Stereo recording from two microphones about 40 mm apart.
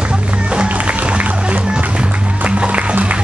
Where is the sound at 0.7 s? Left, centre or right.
Right.